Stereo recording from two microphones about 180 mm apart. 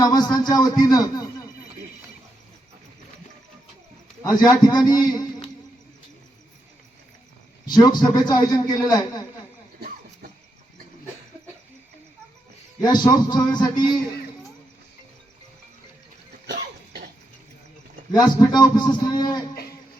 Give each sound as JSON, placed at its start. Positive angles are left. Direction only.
{"t": 0.0, "sound": "a man's voice", "side_deg": 20}
{"t": 4.2, "sound": "a man's voice", "side_deg": 20}
{"t": 7.7, "sound": "a man's voice", "side_deg": 20}
{"t": 12.8, "sound": "a man's voice", "side_deg": 25}
{"t": 16.5, "sound": "cough", "side_deg": -60}
{"t": 18.1, "sound": "a man's voice", "side_deg": 20}